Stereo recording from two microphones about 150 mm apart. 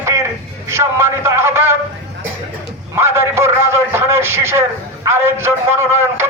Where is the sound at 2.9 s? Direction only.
15° right (ahead or behind).